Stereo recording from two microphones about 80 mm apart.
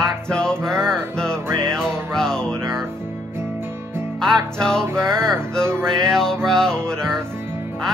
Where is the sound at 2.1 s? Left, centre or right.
Centre.